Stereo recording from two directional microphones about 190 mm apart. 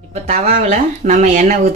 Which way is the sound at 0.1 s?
40° right (ahead or behind).